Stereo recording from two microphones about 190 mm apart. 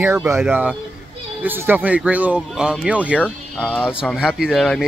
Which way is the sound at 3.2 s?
5° left (ahead or behind).